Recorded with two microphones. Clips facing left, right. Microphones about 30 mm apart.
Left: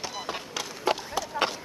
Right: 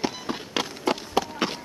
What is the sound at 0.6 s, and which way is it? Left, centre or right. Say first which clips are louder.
Run: right 10 dB; right.